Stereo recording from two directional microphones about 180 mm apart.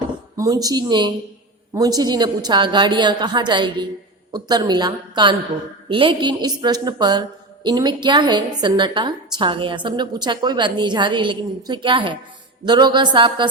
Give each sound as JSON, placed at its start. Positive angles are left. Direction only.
{"t": 0.3, "sound": "speech", "side_deg": -20}